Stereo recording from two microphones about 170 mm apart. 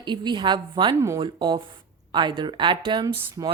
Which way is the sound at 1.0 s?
15° right (ahead or behind).